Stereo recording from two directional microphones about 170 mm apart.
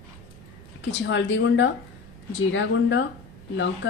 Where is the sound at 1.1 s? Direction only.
90° left.